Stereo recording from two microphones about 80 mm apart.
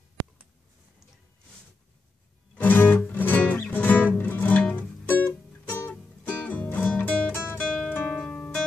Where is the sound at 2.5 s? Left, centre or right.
Left.